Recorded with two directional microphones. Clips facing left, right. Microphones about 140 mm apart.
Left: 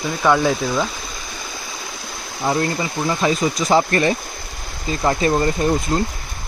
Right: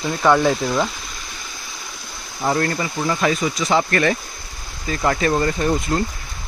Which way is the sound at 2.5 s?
20° left (ahead or behind).